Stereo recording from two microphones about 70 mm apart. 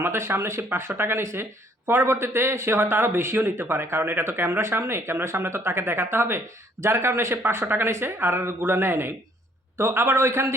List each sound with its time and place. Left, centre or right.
0.0 s speech: right